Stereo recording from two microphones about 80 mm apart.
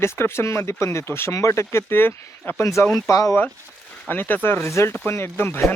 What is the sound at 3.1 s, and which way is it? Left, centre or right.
Bell, left.